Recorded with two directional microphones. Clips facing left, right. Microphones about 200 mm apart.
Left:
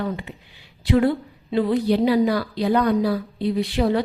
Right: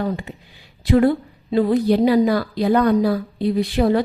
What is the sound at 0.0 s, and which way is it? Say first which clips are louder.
A woman's voice: right 3 dB; 45° right (ahead or behind).